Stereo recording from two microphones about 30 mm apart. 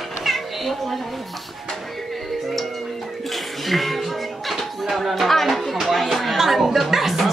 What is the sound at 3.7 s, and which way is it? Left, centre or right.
Music, centre.